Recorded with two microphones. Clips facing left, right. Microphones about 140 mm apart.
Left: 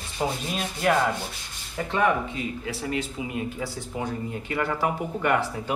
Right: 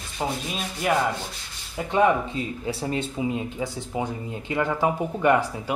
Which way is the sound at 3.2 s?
30° right (ahead or behind).